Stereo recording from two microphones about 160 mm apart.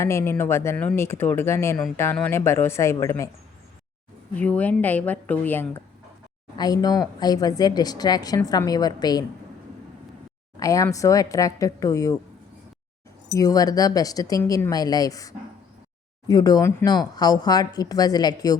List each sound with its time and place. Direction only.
0.0 s speech: 15° left (ahead or behind)
4.4 s speech: 10° left (ahead or behind)
6.6 s speech: 25° left (ahead or behind)
10.6 s speech: 20° left (ahead or behind)
13.3 s speech: 25° left (ahead or behind)